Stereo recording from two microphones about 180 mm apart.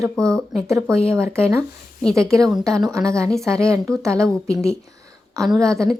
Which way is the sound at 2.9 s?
15° right (ahead or behind).